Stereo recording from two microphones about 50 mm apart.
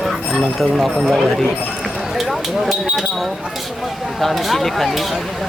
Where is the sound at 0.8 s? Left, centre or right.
Centre.